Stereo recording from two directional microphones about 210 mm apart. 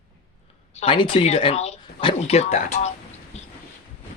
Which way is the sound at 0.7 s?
25° left (ahead or behind).